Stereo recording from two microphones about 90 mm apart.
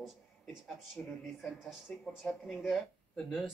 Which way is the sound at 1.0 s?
10° left (ahead or behind).